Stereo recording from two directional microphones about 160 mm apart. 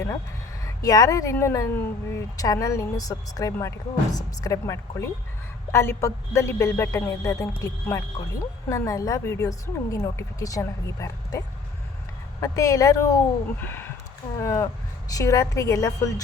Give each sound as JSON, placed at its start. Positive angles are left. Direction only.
{"t": 0.6, "sound": "speech", "side_deg": 20}